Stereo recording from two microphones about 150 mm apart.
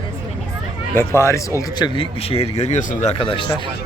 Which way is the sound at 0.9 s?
20° left (ahead or behind).